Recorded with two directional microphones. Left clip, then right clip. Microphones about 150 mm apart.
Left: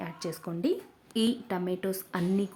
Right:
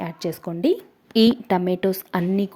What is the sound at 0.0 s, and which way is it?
Speech, 30° right (ahead or behind).